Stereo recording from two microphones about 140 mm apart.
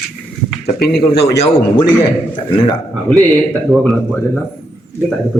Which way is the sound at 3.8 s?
5° left (ahead or behind).